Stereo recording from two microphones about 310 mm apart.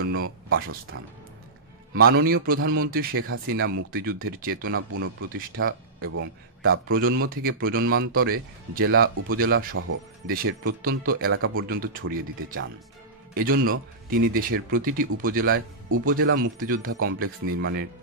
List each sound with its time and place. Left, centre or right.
0.5 s speech: right
2.0 s a man's voice: right
4.7 s a man's voice: right
11.3 s speech: right
11.8 s a man's voice: right
13.3 s a man's voice: right